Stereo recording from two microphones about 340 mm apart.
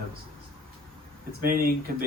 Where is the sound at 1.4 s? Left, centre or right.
Right.